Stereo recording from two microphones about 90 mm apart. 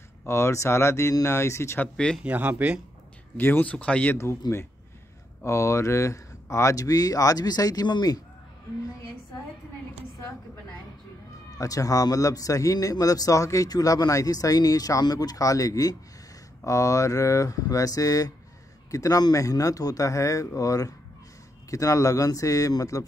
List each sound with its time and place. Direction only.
0.2 s a man's voice: 30° left (ahead or behind)
2.2 s speech: 15° right (ahead or behind)
3.3 s speech: 25° left (ahead or behind)
4.4 s speech: 50° left (ahead or behind)
5.4 s a man's voice: 35° left (ahead or behind); by 8.2 s 50° left (ahead or behind)
11.5 s a man's voice: 40° left (ahead or behind)